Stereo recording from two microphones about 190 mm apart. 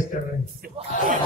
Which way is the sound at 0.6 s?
45° right (ahead or behind).